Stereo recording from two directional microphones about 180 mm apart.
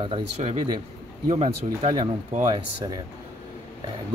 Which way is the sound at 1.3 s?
35° right (ahead or behind).